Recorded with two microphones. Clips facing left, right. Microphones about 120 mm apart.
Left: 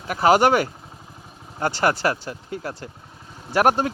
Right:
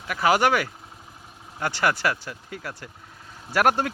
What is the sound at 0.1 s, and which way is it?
Speech, 35° left (ahead or behind).